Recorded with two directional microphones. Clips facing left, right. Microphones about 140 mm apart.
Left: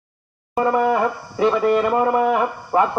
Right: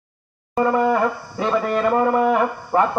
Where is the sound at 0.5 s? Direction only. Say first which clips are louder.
Even; 5° left (ahead or behind).